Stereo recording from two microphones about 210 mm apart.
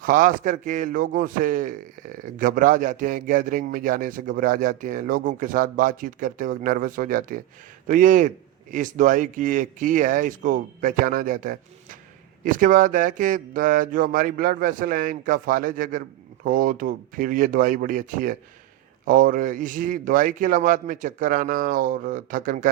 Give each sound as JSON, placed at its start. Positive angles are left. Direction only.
{"t": 0.0, "sound": "speech", "side_deg": -40}